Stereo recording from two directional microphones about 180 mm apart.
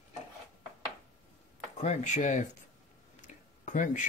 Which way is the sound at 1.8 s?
40° left (ahead or behind).